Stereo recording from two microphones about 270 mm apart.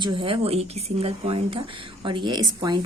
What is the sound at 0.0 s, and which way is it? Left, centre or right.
Speech, centre.